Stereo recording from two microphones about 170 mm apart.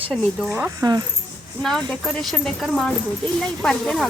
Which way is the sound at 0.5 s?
20° right (ahead or behind).